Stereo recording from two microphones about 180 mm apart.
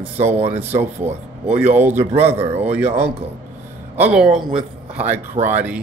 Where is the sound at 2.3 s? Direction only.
35° right (ahead or behind).